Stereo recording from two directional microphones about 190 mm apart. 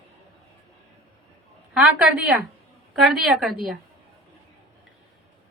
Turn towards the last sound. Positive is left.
turn(degrees=0)  # may be behind; listen again after turning